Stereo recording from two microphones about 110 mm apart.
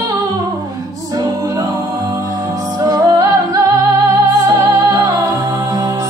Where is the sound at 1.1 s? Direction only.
35° right (ahead or behind).